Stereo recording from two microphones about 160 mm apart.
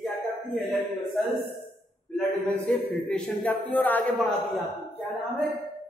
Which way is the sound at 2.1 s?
10° left (ahead or behind).